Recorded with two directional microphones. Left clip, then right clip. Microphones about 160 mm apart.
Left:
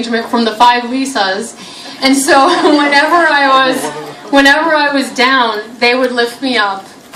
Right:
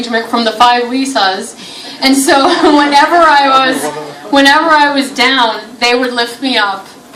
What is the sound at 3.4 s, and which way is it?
A woman's voice, 15° left (ahead or behind).